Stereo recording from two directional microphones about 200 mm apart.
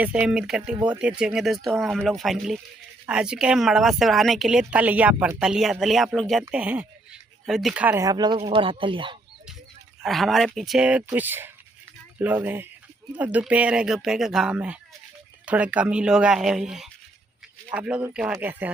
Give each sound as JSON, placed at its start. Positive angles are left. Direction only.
{"t": 0.0, "sound": "speech", "side_deg": -5}
{"t": 10.0, "sound": "speech", "side_deg": 0}